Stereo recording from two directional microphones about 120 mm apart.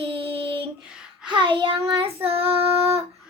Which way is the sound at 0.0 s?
50° right (ahead or behind).